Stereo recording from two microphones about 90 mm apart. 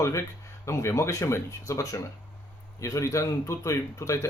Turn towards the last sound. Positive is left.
turn(degrees=35)  # may be behind; listen again after turning